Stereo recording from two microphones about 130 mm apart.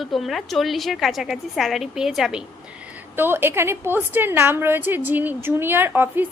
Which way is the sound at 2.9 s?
15° right (ahead or behind).